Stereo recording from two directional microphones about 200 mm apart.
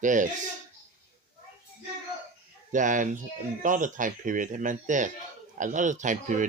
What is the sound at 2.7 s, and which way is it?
A man's voice, 40° right (ahead or behind).